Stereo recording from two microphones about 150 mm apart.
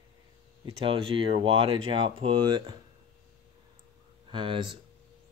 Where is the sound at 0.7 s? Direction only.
35° right (ahead or behind).